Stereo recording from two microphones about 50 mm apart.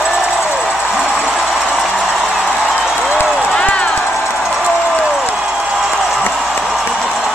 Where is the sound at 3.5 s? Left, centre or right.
Left.